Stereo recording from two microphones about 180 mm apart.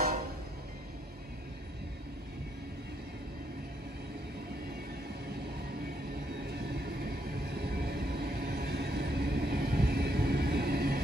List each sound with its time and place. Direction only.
6.4 s train: 65° right (ahead or behind)